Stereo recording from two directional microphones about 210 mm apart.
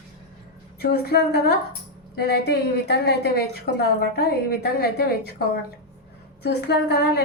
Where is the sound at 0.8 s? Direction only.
50° left (ahead or behind).